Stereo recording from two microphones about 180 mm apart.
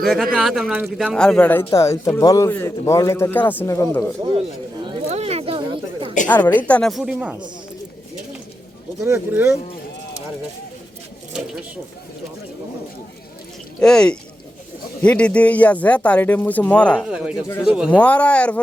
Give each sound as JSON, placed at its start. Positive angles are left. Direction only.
{"t": 0.0, "sound": "speech", "side_deg": 0}
{"t": 1.1, "sound": "speech", "side_deg": 5}
{"t": 4.9, "sound": "a sound", "side_deg": -35}
{"t": 6.5, "sound": "speech", "side_deg": 10}
{"t": 9.0, "sound": "speech", "side_deg": -15}
{"t": 13.7, "sound": "speech", "side_deg": 5}
{"t": 17.1, "sound": "speech", "side_deg": -5}
{"t": 17.9, "sound": "speech", "side_deg": 10}